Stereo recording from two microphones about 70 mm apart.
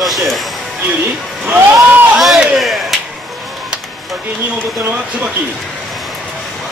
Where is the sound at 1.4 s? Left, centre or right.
Right.